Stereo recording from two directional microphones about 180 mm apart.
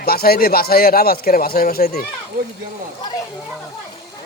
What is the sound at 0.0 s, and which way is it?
Speech, 55° left (ahead or behind).